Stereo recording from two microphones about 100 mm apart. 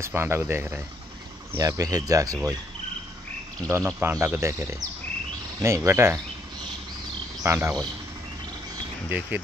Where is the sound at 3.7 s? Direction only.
25° right (ahead or behind).